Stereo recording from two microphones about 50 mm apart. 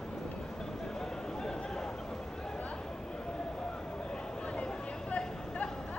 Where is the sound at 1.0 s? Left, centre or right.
Centre.